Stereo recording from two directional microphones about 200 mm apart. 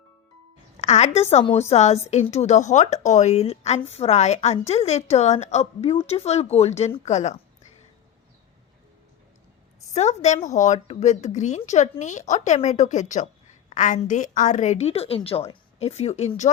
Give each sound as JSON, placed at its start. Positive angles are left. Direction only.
{"t": 0.8, "sound": "a woman's voice", "side_deg": 35}
{"t": 9.9, "sound": "a woman's voice", "side_deg": 35}